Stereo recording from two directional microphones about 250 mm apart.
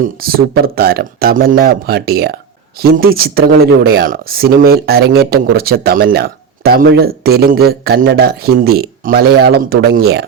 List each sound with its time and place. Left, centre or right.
0.0 s speech: right